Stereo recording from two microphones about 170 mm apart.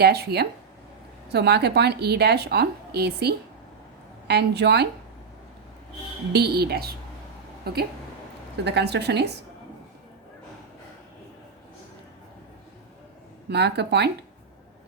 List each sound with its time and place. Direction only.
0.0 s a woman's voice: 70° right (ahead or behind)
6.3 s a woman's voice: 70° right (ahead or behind)
8.6 s a woman's voice: 80° right
13.5 s a woman's voice: 75° right (ahead or behind)